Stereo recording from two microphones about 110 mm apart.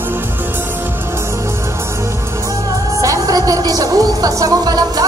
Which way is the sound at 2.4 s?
30° right (ahead or behind).